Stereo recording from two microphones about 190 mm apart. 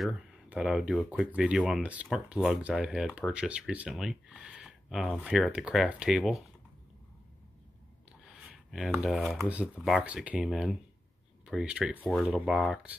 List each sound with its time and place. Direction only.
0.0 s speech: centre (ahead or behind)
8.7 s speech: 5° right (ahead or behind)
12.0 s speech: 5° left (ahead or behind)